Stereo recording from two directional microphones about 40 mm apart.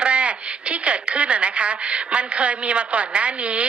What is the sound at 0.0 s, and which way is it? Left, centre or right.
A woman's voice, right.